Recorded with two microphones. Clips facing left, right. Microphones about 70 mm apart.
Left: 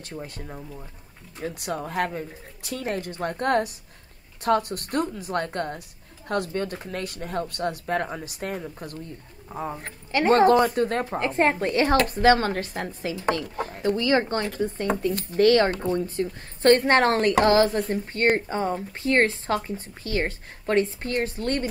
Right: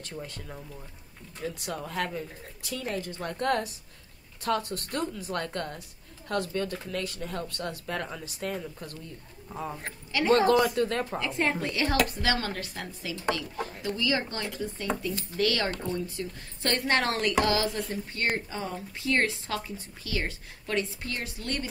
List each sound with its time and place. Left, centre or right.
0.5 s speech: centre
1.5 s speech: left
1.8 s speech: left
2.6 s speech: left
4.6 s speech: left
5.3 s speech: left
7.2 s speech: left
7.4 s speech: left
7.8 s speech: left
9.5 s speech: left
9.8 s speech: left